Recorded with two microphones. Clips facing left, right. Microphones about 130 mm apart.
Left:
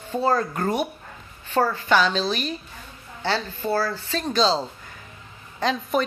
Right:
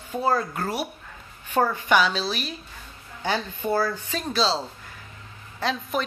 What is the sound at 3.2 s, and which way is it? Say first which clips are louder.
Speech: left 1 dB; 15° right (ahead or behind).